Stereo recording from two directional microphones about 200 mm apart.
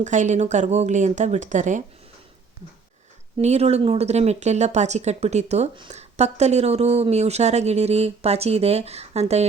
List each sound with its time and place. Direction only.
0.0 s speech: 35° right (ahead or behind)
3.3 s speech: 30° right (ahead or behind)